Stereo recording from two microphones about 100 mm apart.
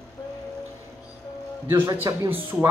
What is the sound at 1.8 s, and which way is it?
Speech, 30° right (ahead or behind).